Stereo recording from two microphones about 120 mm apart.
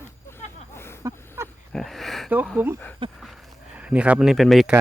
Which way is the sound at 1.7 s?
Centre (ahead or behind).